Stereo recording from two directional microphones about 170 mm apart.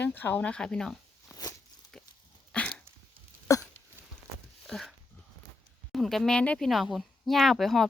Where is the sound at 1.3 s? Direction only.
20° left (ahead or behind).